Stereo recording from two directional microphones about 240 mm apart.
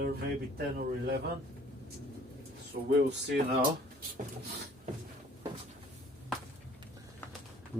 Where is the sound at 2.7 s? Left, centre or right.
Right.